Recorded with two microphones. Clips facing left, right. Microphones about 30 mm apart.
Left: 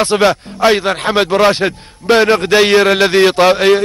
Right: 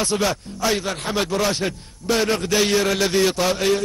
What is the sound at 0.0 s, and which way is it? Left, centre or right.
A man's voice, left.